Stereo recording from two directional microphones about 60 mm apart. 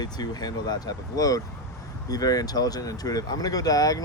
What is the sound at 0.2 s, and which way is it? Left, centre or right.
Speech, left.